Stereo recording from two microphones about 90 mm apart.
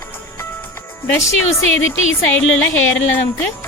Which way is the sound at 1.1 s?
35° left (ahead or behind).